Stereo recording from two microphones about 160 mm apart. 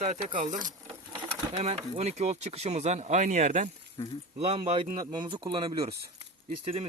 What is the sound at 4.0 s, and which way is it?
Speech, 25° left (ahead or behind).